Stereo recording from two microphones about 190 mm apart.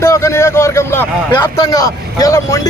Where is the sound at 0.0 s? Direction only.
15° left (ahead or behind).